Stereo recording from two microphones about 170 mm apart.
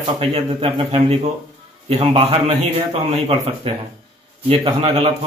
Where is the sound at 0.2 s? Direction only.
35° right (ahead or behind).